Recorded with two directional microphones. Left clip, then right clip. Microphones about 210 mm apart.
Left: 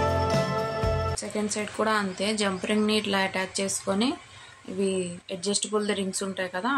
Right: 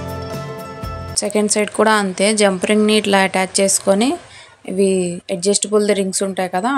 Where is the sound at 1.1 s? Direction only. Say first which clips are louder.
Right 13 dB; 40° right (ahead or behind).